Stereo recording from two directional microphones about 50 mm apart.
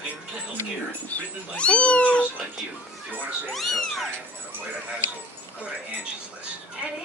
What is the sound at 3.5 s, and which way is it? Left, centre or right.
Cat, centre.